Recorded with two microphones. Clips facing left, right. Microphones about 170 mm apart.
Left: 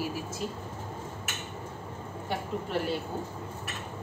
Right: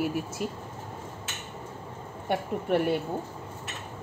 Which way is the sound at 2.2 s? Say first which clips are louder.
Right 5 dB; 60° right (ahead or behind).